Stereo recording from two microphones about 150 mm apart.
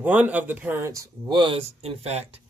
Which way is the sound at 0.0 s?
10° right (ahead or behind).